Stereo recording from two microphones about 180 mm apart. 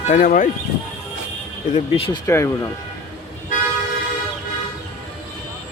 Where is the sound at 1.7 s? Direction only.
30° left (ahead or behind).